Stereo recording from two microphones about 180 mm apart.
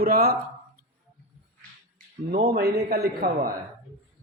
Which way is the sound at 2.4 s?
60° right (ahead or behind).